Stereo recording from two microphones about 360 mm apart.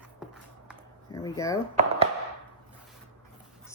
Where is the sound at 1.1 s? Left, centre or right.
Centre.